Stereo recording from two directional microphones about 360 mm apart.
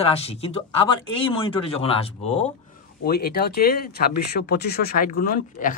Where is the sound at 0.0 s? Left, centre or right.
Centre.